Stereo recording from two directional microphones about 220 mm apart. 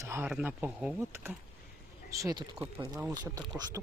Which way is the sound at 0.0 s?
10° right (ahead or behind).